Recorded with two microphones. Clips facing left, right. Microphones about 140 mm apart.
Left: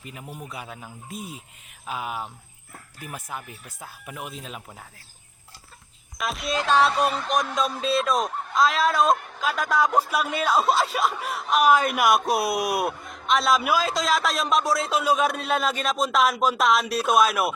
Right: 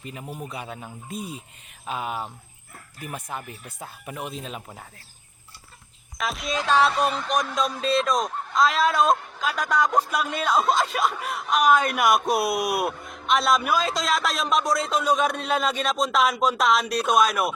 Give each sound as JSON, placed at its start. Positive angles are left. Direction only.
{"t": 0.0, "sound": "speech", "side_deg": 5}
{"t": 0.3, "sound": "a man's voice", "side_deg": -20}
{"t": 0.5, "sound": "speech", "side_deg": 0}
{"t": 6.1, "sound": "speech", "side_deg": 0}